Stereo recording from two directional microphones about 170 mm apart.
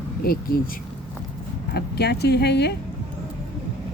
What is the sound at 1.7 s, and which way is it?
Speech, 75° left (ahead or behind).